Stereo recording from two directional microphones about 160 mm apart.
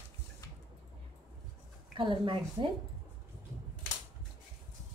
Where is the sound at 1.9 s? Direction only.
30° right (ahead or behind).